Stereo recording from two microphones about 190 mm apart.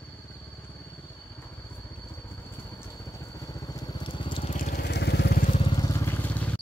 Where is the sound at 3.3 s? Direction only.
15° left (ahead or behind).